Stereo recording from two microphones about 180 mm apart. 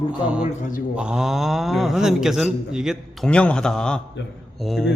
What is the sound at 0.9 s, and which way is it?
Speech, 5° right (ahead or behind).